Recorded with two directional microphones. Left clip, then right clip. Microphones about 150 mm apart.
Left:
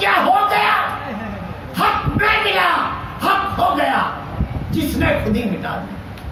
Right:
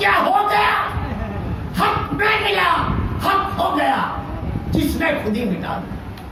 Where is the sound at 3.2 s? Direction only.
10° right (ahead or behind).